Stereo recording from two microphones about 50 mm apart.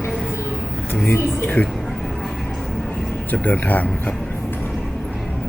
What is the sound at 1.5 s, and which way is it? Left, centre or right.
Speech, left.